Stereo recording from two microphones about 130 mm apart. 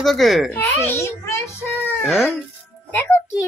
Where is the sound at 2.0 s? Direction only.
Centre (ahead or behind).